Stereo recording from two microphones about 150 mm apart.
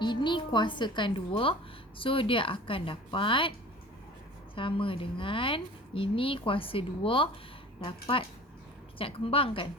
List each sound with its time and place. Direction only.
0.0 s a woman's voice: 30° left (ahead or behind)
4.5 s a woman's voice: 35° left (ahead or behind)